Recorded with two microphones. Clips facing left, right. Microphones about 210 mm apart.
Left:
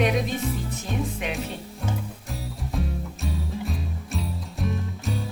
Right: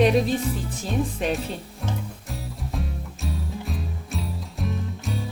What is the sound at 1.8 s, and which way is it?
Music, centre (ahead or behind).